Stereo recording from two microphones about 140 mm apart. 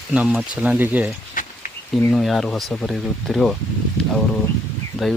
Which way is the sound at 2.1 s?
Centre (ahead or behind).